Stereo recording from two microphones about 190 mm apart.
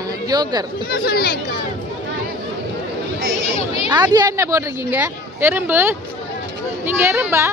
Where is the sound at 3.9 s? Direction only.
20° right (ahead or behind).